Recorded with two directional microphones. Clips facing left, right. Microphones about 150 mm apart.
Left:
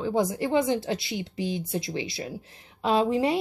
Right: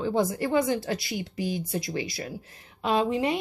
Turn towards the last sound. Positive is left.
turn(degrees=35)  # may be behind; listen again after turning